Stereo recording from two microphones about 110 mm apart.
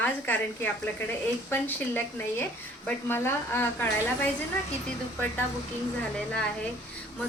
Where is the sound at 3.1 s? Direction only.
20° left (ahead or behind).